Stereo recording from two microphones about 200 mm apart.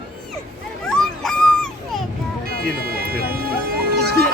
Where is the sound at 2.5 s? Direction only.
50° right (ahead or behind).